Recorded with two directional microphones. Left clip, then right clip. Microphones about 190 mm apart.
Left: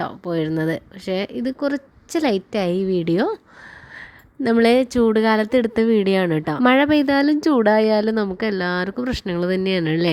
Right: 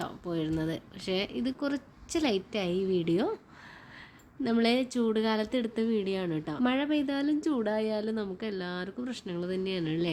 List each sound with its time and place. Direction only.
0.0 s speech: 40° left (ahead or behind)
4.4 s speech: 40° left (ahead or behind)